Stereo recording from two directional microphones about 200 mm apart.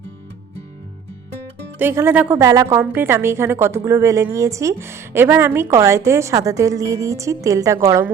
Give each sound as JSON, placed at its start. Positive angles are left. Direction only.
{"t": 1.8, "sound": "a woman's voice", "side_deg": -10}